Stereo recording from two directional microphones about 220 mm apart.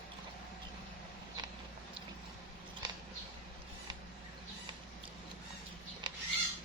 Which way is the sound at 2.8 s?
20° right (ahead or behind).